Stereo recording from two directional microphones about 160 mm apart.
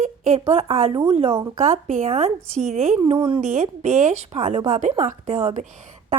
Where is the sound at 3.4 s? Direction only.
50° right (ahead or behind).